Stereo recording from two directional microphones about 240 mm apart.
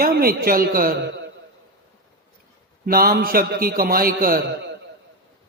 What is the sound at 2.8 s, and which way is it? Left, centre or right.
A man's voice, right.